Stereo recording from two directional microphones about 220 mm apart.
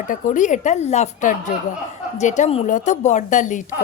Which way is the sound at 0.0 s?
35° left (ahead or behind).